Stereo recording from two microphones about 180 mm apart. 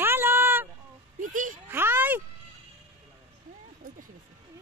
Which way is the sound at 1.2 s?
45° right (ahead or behind).